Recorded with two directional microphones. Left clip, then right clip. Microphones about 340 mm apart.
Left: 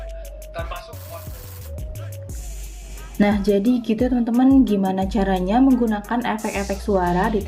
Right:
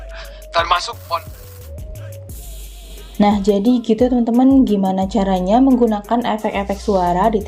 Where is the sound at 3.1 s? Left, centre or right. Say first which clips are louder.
Right 4 dB; centre.